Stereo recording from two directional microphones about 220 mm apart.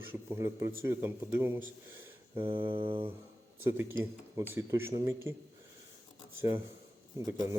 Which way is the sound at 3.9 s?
10° right (ahead or behind).